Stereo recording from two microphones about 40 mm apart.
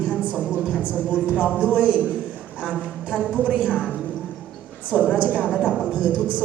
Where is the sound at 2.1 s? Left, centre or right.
Right.